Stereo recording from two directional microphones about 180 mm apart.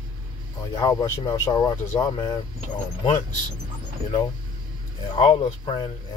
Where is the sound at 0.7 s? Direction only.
20° left (ahead or behind).